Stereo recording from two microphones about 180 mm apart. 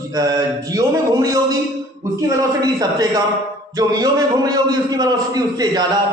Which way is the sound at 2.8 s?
20° right (ahead or behind).